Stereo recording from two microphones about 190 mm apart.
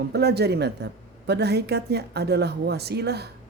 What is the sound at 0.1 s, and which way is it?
Speech, 60° right (ahead or behind).